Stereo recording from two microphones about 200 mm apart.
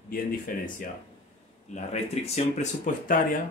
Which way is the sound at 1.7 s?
35° left (ahead or behind).